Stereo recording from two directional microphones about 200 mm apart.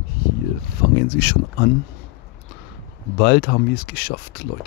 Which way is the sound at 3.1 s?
55° left (ahead or behind).